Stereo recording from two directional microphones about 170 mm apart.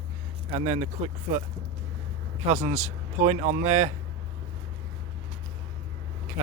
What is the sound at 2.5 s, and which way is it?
Speech, 45° right (ahead or behind).